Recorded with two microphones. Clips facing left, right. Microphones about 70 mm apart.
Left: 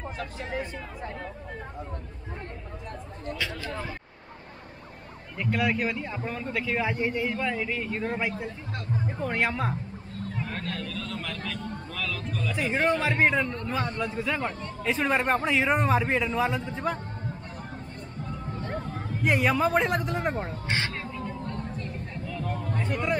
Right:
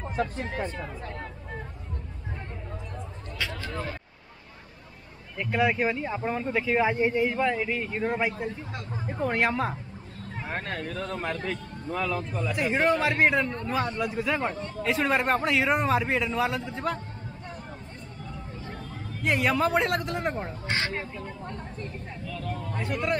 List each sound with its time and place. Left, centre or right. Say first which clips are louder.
5.4 s speech: right 2 dB; centre
10.5 s a man's voice: right 2 dB; right
12.5 s a man's voice: right 1 dB; centre
18.6 s vehicle: left 6 dB; left
19.2 s a man's voice: left 1 dB; centre
20.8 s speech: right 2 dB; right
21.4 s chatter: left 3 dB; right
22.2 s a sound: left 1 dB; centre
22.7 s a sound: even; centre